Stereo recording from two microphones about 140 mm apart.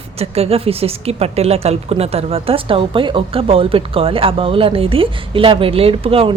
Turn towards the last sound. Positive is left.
turn(degrees=-40)  # may be behind; listen again after turning